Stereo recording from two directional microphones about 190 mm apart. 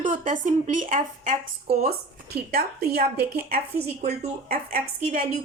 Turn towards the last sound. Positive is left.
turn(degrees=-50)  # may be behind; listen again after turning